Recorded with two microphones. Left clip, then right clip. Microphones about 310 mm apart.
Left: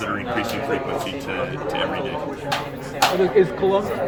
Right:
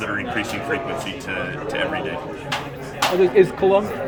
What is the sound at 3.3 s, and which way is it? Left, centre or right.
Speech, right.